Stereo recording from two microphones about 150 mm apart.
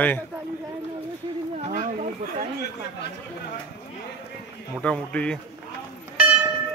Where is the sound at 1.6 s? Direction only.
60° right (ahead or behind).